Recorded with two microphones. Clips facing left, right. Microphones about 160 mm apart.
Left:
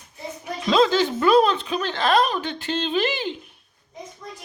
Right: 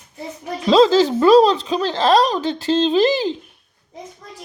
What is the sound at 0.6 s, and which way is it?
Speech, 35° right (ahead or behind).